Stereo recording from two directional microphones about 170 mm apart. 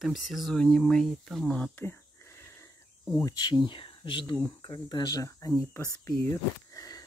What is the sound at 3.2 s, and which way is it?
Speech, 25° left (ahead or behind).